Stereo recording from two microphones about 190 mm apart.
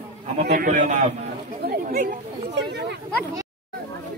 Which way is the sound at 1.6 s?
50° right (ahead or behind).